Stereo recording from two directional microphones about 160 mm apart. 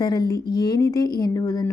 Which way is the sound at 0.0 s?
25° left (ahead or behind).